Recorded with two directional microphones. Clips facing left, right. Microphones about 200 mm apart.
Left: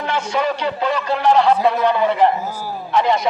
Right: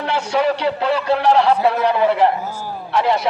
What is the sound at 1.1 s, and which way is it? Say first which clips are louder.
A man's voice: even; 5° right (ahead or behind).